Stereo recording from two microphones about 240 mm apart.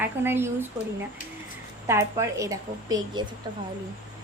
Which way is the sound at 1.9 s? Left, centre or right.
Centre.